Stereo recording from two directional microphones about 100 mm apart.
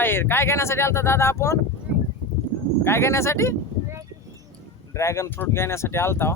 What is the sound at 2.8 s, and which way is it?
Speech, 25° left (ahead or behind).